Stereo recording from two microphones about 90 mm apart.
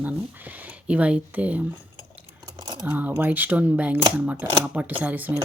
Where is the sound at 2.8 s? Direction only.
20° right (ahead or behind).